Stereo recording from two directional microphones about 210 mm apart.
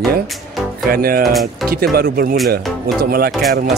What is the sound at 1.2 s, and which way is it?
Speech, centre (ahead or behind).